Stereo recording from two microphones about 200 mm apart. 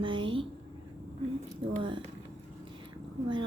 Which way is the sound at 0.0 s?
25° right (ahead or behind).